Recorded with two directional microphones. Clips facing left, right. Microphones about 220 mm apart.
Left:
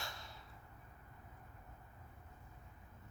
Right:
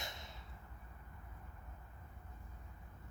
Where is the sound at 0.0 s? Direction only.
20° right (ahead or behind).